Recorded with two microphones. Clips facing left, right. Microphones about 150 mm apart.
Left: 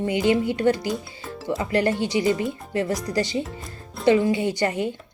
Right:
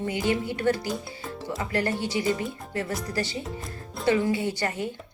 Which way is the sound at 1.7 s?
20° left (ahead or behind).